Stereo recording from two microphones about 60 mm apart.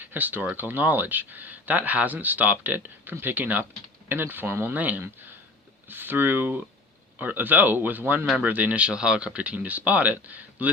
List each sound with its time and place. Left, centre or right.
0.0 s speech: right